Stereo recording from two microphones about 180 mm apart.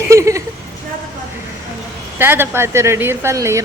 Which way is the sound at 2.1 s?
10° right (ahead or behind).